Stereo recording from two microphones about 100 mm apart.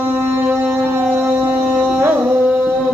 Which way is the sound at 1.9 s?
15° right (ahead or behind).